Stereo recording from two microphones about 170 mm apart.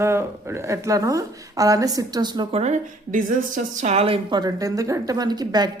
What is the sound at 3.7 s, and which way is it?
A woman's voice, 40° right (ahead or behind).